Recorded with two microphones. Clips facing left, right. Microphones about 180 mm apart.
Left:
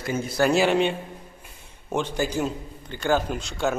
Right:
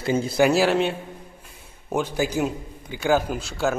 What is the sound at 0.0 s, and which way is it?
Speech, 30° right (ahead or behind).